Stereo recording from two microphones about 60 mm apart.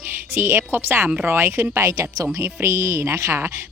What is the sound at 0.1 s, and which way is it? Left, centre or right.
Speech, right.